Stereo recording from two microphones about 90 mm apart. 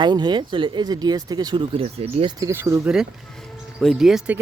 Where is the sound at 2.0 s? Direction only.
90° right.